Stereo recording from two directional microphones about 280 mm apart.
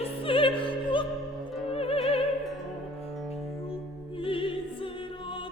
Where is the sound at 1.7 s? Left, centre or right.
Left.